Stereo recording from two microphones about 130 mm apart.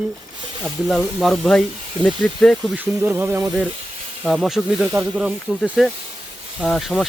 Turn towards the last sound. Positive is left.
turn(degrees=0)  # may be behind; listen again after turning